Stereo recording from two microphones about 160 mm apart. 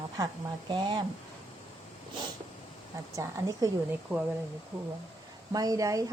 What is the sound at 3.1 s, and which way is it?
Speech, 20° right (ahead or behind).